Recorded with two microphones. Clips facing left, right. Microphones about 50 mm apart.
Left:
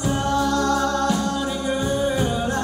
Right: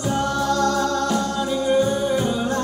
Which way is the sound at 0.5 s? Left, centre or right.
Left.